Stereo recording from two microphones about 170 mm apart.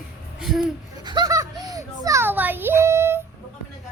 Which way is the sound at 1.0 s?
25° right (ahead or behind).